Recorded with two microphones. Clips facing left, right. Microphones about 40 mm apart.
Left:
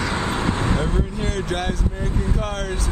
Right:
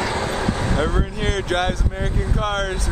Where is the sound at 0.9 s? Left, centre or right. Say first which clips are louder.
Right 2 dB; right.